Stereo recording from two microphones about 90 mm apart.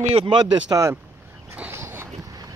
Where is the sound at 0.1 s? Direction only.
70° right (ahead or behind).